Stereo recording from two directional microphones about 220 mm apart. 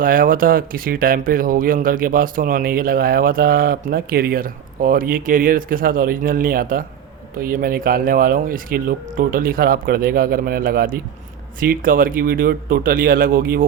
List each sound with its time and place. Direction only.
0.0 s speech: 40° right (ahead or behind)